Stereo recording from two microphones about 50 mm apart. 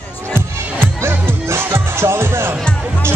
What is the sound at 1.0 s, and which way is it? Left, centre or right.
Music, right.